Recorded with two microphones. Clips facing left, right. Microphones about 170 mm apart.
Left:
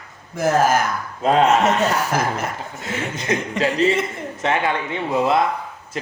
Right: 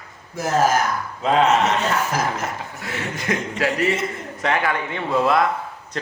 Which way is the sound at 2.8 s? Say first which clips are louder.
Left 2 dB; 20° left (ahead or behind).